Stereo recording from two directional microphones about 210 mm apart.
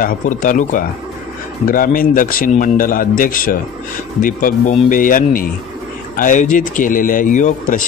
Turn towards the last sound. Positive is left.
turn(degrees=35)  # may be behind; listen again after turning